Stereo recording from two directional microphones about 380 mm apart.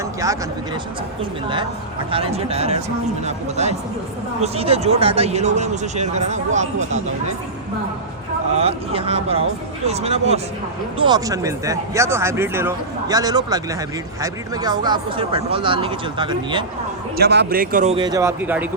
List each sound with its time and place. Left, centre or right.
0.0 s a sound: centre
2.0 s speech: centre
8.5 s speech: centre
17.2 s speech: right; by 18.7 s centre